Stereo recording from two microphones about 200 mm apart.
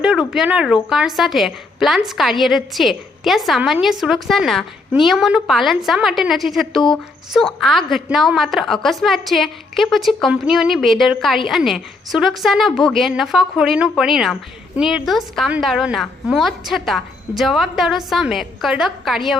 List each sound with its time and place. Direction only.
0.0 s a woman's voice: 5° right (ahead or behind)